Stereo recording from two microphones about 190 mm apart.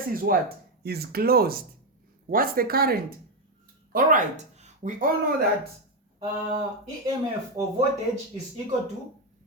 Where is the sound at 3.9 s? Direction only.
40° right (ahead or behind).